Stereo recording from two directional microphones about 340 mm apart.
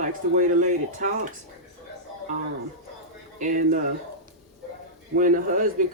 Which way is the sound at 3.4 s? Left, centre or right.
Right.